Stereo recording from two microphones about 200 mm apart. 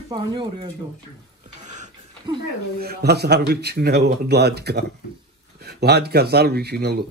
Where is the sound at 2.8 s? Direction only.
55° right (ahead or behind).